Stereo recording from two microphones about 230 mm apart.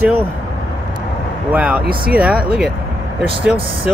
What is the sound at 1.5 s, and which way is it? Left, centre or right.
Speech, centre.